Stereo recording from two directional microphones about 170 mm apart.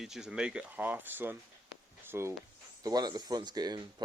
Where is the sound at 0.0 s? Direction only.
5° right (ahead or behind).